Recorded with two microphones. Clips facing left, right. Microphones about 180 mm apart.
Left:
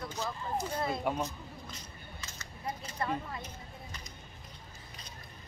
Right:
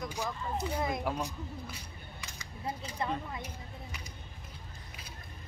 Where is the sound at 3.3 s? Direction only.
10° right (ahead or behind).